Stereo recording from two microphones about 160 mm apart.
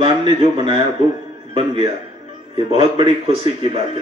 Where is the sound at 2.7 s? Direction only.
40° right (ahead or behind).